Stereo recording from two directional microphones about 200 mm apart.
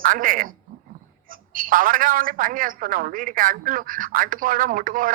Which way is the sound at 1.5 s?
45° right (ahead or behind).